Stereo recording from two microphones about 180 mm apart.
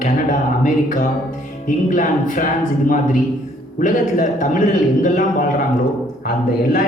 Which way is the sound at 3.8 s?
45° left (ahead or behind).